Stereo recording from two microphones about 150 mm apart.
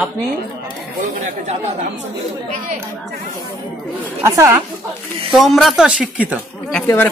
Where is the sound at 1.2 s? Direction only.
50° right (ahead or behind).